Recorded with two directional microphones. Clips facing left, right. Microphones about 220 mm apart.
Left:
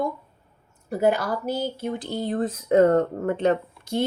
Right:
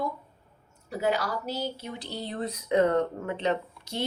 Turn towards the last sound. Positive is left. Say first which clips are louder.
# left 6 dB
turn(degrees=50)  # may be behind; listen again after turning